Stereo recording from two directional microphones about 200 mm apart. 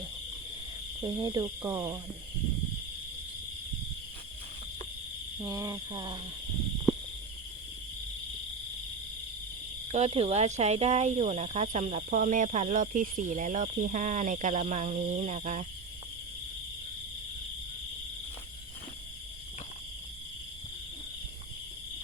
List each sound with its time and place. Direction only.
1.0 s speech: 20° right (ahead or behind)
5.4 s speech: 15° right (ahead or behind)
9.9 s speech: 30° right (ahead or behind)